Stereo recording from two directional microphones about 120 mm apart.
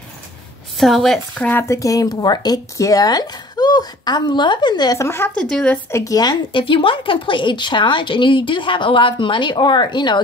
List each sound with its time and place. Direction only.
0.7 s a woman's voice: centre (ahead or behind)
1.5 s speech: 20° left (ahead or behind); by 4.9 s 35° left (ahead or behind)
4.9 s speech: 20° left (ahead or behind)
5.4 s speech: 5° left (ahead or behind)
5.9 s a woman's voice: 25° left (ahead or behind)